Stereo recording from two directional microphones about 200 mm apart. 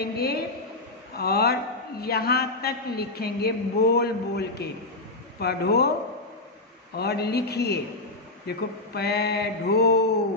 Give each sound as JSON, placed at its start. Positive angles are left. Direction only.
{"t": 0.0, "sound": "a man's voice", "side_deg": 50}
{"t": 7.0, "sound": "a man's voice", "side_deg": 55}